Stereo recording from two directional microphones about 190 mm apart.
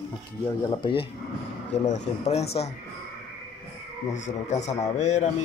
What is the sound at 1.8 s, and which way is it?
Speech, 35° left (ahead or behind).